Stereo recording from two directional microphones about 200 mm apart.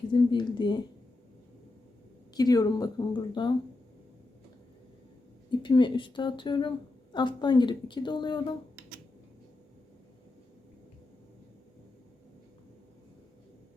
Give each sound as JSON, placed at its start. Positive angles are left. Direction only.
{"t": 0.1, "sound": "a woman's voice", "side_deg": 25}
{"t": 2.3, "sound": "a woman's voice", "side_deg": 20}
{"t": 5.5, "sound": "a woman's voice", "side_deg": 25}